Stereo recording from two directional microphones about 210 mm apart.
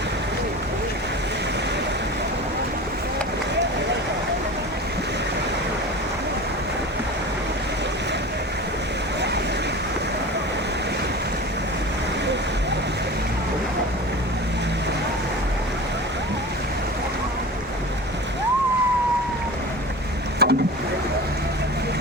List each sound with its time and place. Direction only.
20.4 s boat: 50° right (ahead or behind)